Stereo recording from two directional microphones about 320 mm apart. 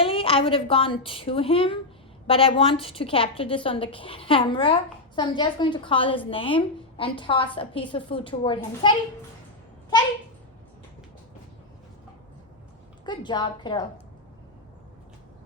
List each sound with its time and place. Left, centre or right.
0.0 s a woman's voice: centre
13.1 s a woman's voice: centre